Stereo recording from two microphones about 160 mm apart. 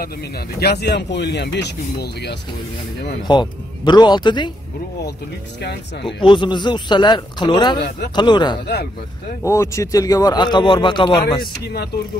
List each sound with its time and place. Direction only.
0.6 s speech: 85° left
3.3 s speech: 30° left (ahead or behind)
6.1 s speech: 30° left (ahead or behind)